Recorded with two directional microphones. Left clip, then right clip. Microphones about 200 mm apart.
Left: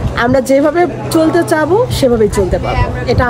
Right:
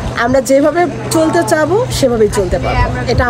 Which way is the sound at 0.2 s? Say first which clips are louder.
Even; 25° left (ahead or behind).